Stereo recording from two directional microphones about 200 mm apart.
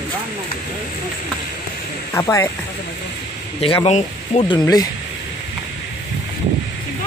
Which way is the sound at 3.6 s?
30° left (ahead or behind).